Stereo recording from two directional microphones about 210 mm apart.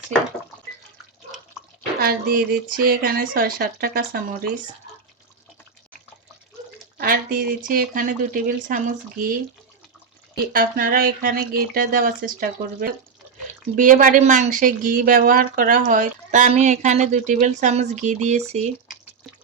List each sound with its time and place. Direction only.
2.0 s speech: 45° right (ahead or behind)
7.0 s a sound: 45° right (ahead or behind)
7.7 s speech: 40° right (ahead or behind)
10.5 s speech: 40° right (ahead or behind)